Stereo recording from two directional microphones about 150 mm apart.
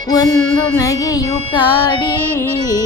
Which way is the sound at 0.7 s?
20° left (ahead or behind).